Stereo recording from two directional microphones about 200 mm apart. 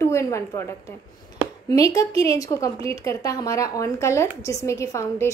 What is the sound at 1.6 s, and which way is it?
A woman's voice, 15° left (ahead or behind).